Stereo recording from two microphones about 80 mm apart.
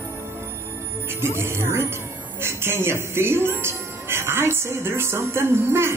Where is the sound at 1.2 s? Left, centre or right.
Right.